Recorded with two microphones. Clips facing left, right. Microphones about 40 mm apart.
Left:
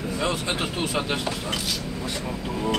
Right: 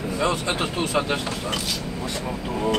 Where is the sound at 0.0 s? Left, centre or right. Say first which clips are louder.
Right 3 dB; centre.